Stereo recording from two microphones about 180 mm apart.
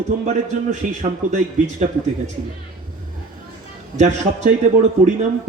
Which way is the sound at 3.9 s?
40° right (ahead or behind).